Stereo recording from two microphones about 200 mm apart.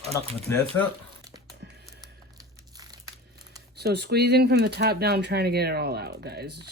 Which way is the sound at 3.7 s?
55° right (ahead or behind).